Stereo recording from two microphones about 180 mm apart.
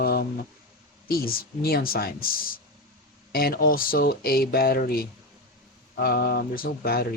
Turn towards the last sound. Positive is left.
turn(degrees=60)  # may be behind; listen again after turning